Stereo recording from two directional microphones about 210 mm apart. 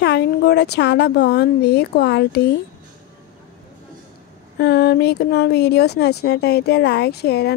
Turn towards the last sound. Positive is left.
turn(degrees=50)  # may be behind; listen again after turning